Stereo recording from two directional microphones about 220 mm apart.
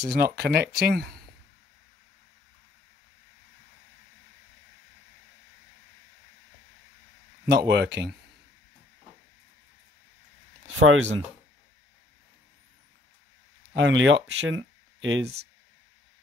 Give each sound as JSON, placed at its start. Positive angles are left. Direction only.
{"t": 0.1, "sound": "speech", "side_deg": -45}
{"t": 7.4, "sound": "speech", "side_deg": -50}
{"t": 10.8, "sound": "speech", "side_deg": -65}
{"t": 13.7, "sound": "speech", "side_deg": -60}